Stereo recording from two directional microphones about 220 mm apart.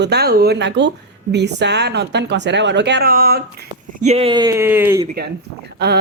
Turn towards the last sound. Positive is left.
turn(degrees=-45)  # may be behind; listen again after turning